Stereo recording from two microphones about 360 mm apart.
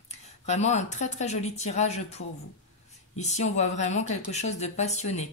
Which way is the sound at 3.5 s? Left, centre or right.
Centre.